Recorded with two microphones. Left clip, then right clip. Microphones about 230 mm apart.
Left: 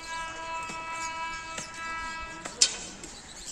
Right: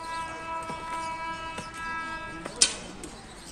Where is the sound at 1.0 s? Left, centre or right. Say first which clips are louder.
Right 1 dB; left.